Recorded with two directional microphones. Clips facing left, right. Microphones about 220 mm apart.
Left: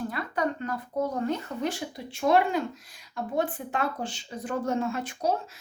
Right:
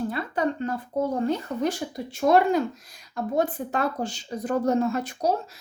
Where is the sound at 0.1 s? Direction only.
30° right (ahead or behind).